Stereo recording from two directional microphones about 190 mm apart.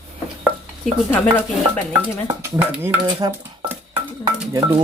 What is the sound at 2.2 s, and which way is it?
Speech, 20° right (ahead or behind).